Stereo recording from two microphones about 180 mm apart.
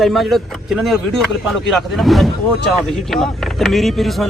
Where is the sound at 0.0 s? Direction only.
Centre (ahead or behind).